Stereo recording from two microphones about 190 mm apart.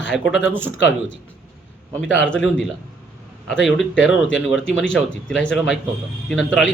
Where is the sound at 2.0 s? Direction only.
75° left (ahead or behind).